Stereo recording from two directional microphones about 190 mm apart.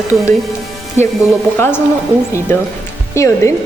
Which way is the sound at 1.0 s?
35° right (ahead or behind).